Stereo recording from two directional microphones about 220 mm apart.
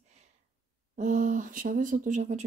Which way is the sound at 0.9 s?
35° right (ahead or behind).